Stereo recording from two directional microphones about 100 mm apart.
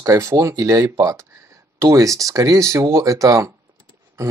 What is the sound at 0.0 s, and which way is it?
Speech, 30° right (ahead or behind).